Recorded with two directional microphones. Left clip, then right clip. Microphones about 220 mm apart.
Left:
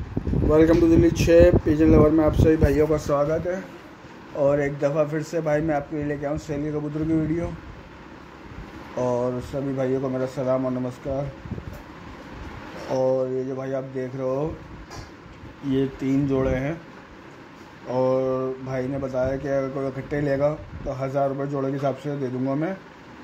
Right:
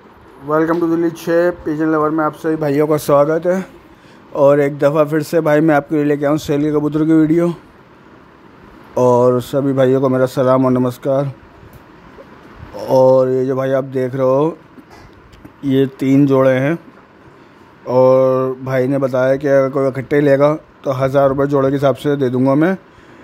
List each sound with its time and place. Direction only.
0.5 s speech: 15° right (ahead or behind)
2.6 s speech: 40° right (ahead or behind)
8.9 s speech: 50° right (ahead or behind)
12.8 s speech: 45° right (ahead or behind)
15.7 s speech: 45° right (ahead or behind)
17.8 s speech: 45° right (ahead or behind)